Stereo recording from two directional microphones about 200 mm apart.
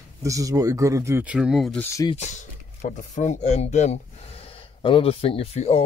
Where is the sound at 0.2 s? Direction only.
15° right (ahead or behind); by 1.9 s centre (ahead or behind).